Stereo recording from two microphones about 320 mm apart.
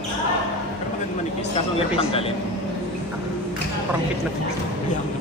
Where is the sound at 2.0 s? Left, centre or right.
Centre.